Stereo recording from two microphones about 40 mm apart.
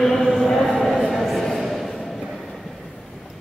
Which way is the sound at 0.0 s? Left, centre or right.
Centre.